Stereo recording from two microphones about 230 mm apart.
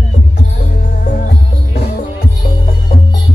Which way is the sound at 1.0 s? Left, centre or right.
Left.